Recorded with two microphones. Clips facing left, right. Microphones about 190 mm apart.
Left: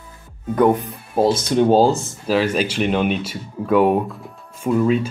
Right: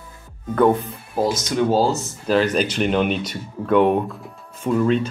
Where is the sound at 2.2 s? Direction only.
5° left (ahead or behind).